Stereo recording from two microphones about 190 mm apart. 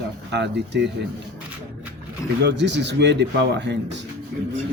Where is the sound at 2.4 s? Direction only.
65° right (ahead or behind).